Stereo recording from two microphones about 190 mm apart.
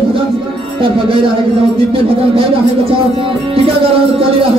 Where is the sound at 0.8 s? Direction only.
30° right (ahead or behind).